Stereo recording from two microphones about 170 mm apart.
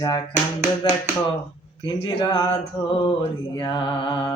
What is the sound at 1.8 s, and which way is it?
Speech, 25° left (ahead or behind).